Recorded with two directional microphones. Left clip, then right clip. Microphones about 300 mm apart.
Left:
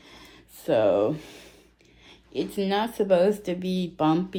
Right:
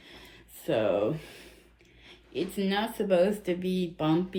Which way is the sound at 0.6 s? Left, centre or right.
Left.